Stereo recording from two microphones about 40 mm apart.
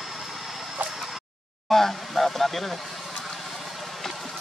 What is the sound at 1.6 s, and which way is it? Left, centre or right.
Speech, centre.